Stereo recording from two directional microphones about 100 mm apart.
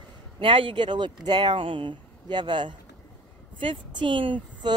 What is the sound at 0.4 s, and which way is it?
Speech, 60° right (ahead or behind).